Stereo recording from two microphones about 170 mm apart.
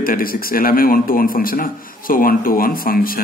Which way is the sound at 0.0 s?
60° left (ahead or behind).